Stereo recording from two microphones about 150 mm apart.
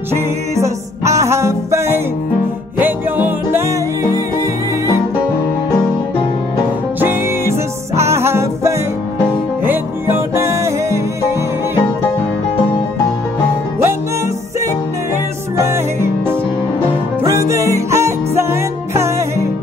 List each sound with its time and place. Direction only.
0.1 s music: 20° right (ahead or behind)
7.0 s music: 15° right (ahead or behind)
15.7 s music: 15° right (ahead or behind)